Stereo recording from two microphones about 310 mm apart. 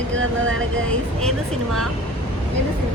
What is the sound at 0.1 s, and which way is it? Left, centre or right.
Speech, right.